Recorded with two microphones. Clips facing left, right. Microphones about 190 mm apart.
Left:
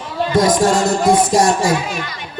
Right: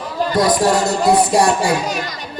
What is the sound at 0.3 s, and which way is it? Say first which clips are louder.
Music: left 1 dB; 45° left (ahead or behind).